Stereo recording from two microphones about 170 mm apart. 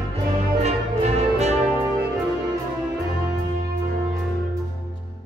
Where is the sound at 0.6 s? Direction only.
40° right (ahead or behind).